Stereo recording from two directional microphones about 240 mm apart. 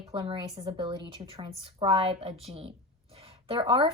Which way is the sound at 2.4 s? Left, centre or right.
Right.